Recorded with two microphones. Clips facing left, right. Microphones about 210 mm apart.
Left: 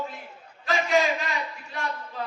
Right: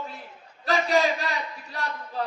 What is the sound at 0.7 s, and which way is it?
Crowd, 35° right (ahead or behind).